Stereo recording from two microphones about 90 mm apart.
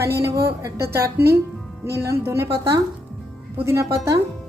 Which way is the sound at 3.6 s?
30° right (ahead or behind).